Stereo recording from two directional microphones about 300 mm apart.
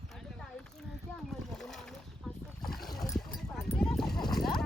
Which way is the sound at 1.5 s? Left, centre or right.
Centre.